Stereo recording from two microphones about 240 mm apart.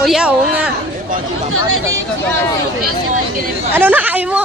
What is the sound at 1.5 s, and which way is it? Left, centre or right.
Speech, right.